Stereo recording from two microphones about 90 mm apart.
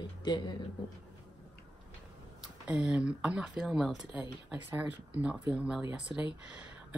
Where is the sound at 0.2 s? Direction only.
50° left (ahead or behind).